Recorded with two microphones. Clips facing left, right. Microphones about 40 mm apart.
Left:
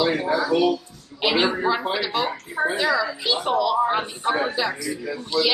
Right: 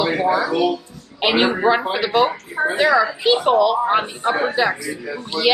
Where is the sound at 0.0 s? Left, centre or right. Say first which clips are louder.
Right 3 dB; right.